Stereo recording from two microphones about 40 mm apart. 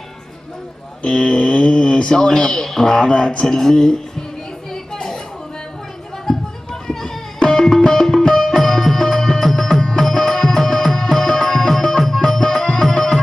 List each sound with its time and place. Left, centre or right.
1.0 s speech: left
3.1 s speech: left
4.9 s a sound: centre
6.3 s run: centre
6.7 s a sound: centre
7.4 s music: centre